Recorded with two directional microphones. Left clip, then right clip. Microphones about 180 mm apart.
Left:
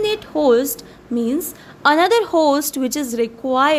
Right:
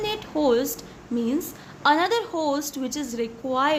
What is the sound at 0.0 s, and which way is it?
A woman's voice, 30° left (ahead or behind).